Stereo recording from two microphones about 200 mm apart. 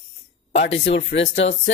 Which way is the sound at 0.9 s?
65° left (ahead or behind).